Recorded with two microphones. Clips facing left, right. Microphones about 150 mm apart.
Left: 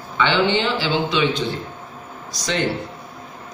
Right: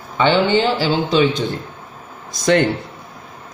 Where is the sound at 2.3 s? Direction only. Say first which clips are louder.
Right 9 dB; 55° right (ahead or behind).